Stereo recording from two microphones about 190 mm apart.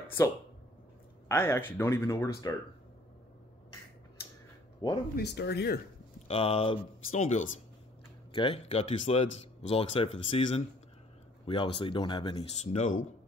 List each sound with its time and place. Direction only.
1.3 s speech: 10° left (ahead or behind)
4.8 s speech: 25° left (ahead or behind)
5.1 s speech: 65° left (ahead or behind)
6.2 s speech: 30° left (ahead or behind)